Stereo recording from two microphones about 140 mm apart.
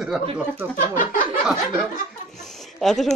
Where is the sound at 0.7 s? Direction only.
70° left (ahead or behind).